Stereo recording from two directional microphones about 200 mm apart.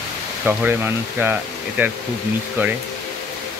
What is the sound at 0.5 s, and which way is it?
Speech, 10° right (ahead or behind).